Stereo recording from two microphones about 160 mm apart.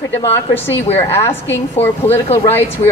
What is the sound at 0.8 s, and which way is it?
Speech, 40° left (ahead or behind).